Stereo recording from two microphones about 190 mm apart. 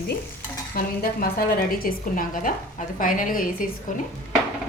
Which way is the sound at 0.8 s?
50° left (ahead or behind).